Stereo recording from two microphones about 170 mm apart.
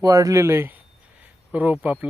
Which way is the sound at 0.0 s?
20° right (ahead or behind).